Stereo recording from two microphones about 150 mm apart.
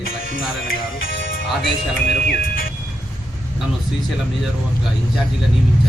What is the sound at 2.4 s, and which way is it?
Speech, 70° left (ahead or behind).